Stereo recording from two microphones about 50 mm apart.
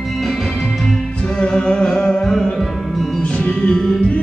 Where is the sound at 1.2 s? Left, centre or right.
Centre.